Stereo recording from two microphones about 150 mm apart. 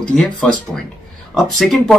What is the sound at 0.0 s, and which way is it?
Speech, 5° left (ahead or behind).